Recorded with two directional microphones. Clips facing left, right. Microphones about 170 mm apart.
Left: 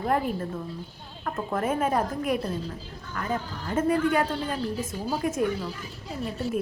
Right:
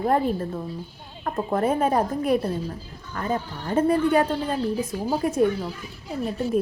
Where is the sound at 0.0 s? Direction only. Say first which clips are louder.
Right 4 dB; 30° right (ahead or behind).